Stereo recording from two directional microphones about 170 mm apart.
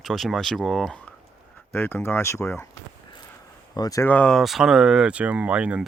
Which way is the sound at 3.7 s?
20° left (ahead or behind).